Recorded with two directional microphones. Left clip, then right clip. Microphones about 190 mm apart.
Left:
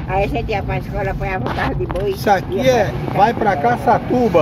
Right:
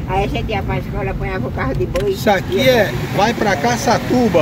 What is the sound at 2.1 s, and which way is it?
Speech, centre (ahead or behind).